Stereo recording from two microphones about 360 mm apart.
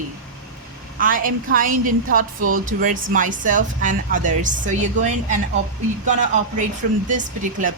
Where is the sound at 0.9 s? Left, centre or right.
Right.